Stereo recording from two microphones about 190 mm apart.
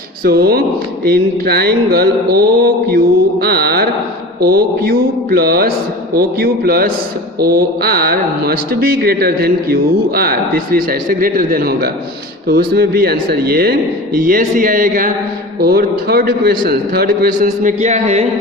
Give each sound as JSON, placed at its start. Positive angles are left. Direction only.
{"t": 0.3, "sound": "speech", "side_deg": -55}
{"t": 1.0, "sound": "a sound", "side_deg": -55}
{"t": 4.4, "sound": "speech", "side_deg": -55}